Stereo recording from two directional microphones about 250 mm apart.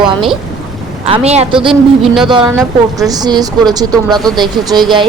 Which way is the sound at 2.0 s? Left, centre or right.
Centre.